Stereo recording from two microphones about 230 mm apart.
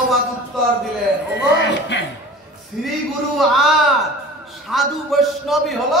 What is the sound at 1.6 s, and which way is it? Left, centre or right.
Speech, left.